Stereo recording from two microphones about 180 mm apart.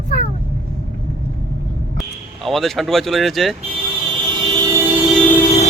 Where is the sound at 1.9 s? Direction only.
Centre (ahead or behind).